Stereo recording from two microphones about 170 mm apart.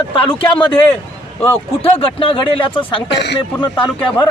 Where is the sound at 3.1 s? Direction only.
85° left.